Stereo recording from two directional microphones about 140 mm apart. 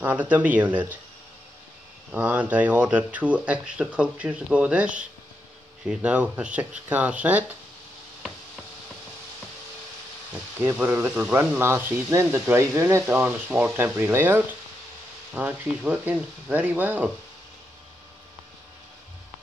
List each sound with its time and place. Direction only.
0.0 s speech: 10° right (ahead or behind)
2.1 s speech: 10° right (ahead or behind)
10.3 s speech: 15° right (ahead or behind)